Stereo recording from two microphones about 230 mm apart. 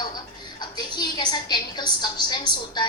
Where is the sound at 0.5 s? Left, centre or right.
Centre.